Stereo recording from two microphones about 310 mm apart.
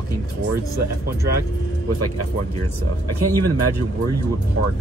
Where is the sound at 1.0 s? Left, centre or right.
Right.